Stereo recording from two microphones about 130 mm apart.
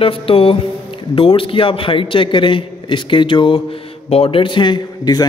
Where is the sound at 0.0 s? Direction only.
45° left (ahead or behind).